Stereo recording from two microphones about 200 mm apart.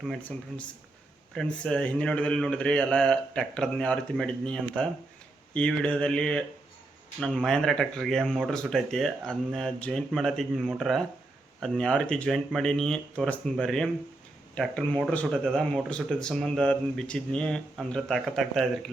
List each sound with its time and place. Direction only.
0.0 s speech: 5° left (ahead or behind)